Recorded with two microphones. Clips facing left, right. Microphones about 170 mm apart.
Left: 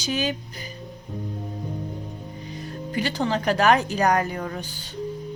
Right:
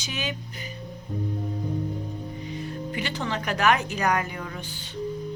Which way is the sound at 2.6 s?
35° left (ahead or behind).